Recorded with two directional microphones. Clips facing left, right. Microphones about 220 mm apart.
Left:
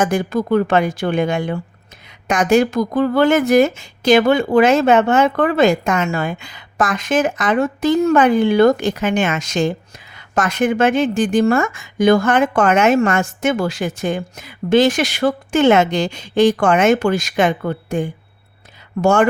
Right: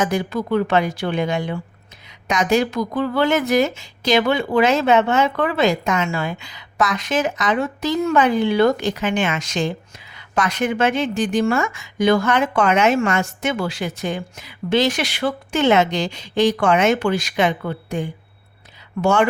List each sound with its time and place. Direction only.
0.0 s a woman's voice: 50° left (ahead or behind)